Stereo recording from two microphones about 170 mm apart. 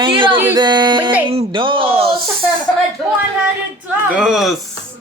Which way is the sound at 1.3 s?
30° right (ahead or behind).